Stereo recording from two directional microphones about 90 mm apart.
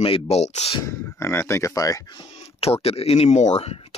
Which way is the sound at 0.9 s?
30° left (ahead or behind).